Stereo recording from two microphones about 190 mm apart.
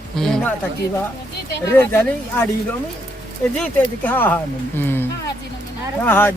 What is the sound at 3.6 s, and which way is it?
Speech, 10° left (ahead or behind).